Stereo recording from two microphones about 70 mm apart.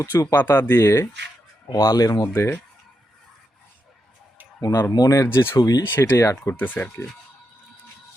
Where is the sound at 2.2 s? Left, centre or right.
Left.